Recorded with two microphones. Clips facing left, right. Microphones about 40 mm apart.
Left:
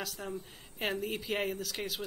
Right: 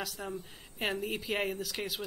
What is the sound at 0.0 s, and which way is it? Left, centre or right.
A man's voice, centre.